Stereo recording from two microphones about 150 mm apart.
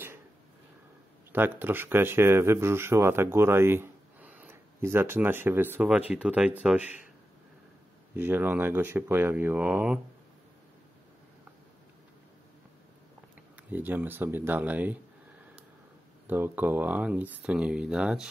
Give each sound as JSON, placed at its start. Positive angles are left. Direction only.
{"t": 1.3, "sound": "speech", "side_deg": -15}
{"t": 8.1, "sound": "speech", "side_deg": -15}
{"t": 13.7, "sound": "speech", "side_deg": -10}
{"t": 16.3, "sound": "speech", "side_deg": -15}